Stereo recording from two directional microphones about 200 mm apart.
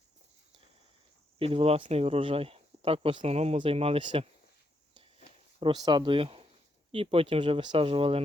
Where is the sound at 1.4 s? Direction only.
30° right (ahead or behind).